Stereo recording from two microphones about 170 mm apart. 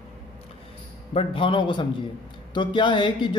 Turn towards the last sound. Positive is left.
turn(degrees=25)  # may be behind; listen again after turning